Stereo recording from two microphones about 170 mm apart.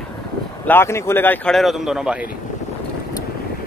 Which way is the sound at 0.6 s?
15° left (ahead or behind).